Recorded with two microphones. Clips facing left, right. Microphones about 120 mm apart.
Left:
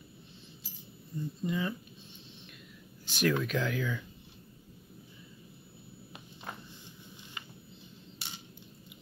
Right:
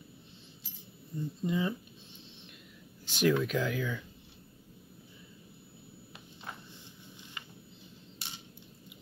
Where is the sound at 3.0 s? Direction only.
20° right (ahead or behind).